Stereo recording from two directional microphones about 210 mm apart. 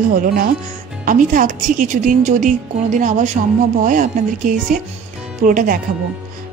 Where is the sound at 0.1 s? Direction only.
40° right (ahead or behind).